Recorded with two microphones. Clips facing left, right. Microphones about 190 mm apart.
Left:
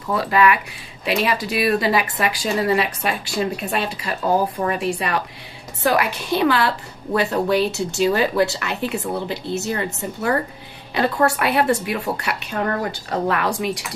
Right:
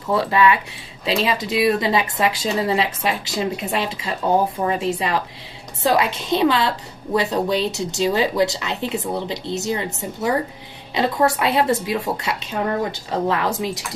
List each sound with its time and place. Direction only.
0.1 s speech: 25° right (ahead or behind)